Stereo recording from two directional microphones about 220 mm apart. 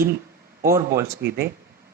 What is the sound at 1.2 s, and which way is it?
Speech, 45° right (ahead or behind).